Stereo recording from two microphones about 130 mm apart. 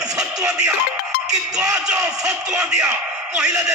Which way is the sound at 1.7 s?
5° right (ahead or behind).